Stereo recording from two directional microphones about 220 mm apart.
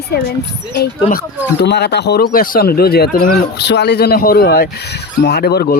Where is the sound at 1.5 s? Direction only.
50° left (ahead or behind).